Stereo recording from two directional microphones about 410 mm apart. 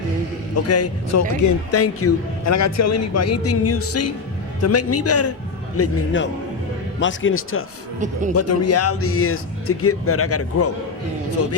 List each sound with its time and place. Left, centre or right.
0.5 s a man's voice: left
7.9 s a man's voice: centre
8.3 s a man's voice: left